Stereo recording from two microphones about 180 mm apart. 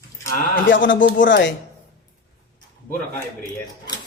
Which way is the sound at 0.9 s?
90° left.